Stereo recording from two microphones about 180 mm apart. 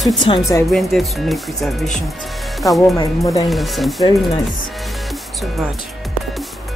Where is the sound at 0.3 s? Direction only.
30° left (ahead or behind).